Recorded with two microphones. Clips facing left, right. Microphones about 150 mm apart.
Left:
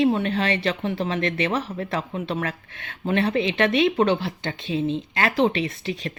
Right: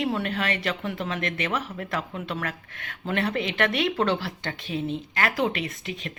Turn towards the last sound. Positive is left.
turn(degrees=35)  # may be behind; listen again after turning